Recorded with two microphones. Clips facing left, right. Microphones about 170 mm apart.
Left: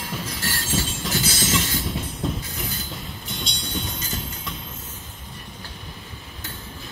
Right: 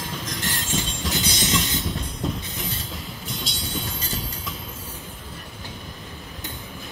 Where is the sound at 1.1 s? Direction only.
20° right (ahead or behind).